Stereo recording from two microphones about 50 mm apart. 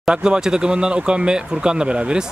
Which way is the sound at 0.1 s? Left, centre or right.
Centre.